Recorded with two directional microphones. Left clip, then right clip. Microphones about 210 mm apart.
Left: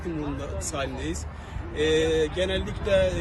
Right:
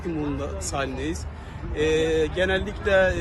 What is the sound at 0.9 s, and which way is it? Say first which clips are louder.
Speech: right 3 dB; 45° right (ahead or behind).